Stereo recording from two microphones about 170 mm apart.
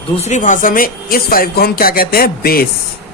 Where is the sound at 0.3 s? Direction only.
45° left (ahead or behind); by 2.6 s 60° left (ahead or behind).